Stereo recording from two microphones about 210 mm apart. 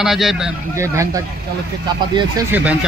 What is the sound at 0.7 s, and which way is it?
Speech, 15° right (ahead or behind).